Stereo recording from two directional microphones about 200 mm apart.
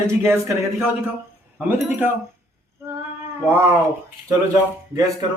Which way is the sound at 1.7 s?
10° right (ahead or behind).